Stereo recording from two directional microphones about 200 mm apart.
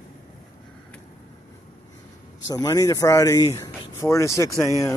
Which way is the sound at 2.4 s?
20° left (ahead or behind).